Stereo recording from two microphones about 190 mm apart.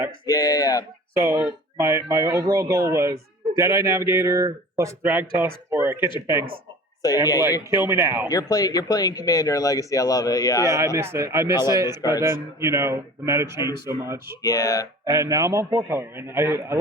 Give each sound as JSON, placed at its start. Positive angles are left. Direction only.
{"t": 0.3, "sound": "speech", "side_deg": 20}
{"t": 1.1, "sound": "speech", "side_deg": -15}
{"t": 7.7, "sound": "speech", "side_deg": -15}
{"t": 8.3, "sound": "speech", "side_deg": 20}
{"t": 10.7, "sound": "speech", "side_deg": -15}
{"t": 11.5, "sound": "speech", "side_deg": 20}
{"t": 12.2, "sound": "speech", "side_deg": -15}
{"t": 14.4, "sound": "speech", "side_deg": 20}
{"t": 15.0, "sound": "speech", "side_deg": -15}